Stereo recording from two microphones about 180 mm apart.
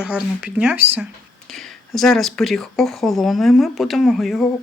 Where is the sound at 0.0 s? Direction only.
5° right (ahead or behind).